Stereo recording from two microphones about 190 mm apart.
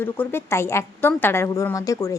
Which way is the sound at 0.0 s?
10° left (ahead or behind).